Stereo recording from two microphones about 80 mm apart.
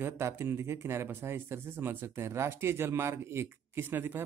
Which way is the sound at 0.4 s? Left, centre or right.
Right.